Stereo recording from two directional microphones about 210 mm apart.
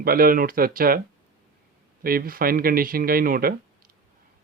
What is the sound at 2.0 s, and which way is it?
Speech, 45° right (ahead or behind).